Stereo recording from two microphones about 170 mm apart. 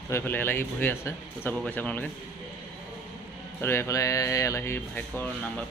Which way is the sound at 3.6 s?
15° left (ahead or behind).